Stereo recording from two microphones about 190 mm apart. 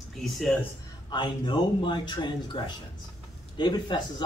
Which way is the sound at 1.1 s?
25° left (ahead or behind).